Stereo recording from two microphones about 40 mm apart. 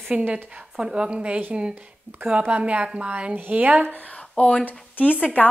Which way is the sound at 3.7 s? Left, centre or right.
Right.